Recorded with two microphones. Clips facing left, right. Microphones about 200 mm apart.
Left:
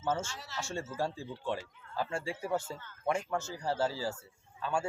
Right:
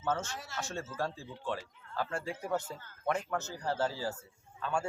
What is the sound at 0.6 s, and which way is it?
A man's voice, 10° left (ahead or behind).